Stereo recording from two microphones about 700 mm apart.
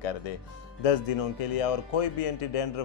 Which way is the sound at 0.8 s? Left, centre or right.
Left.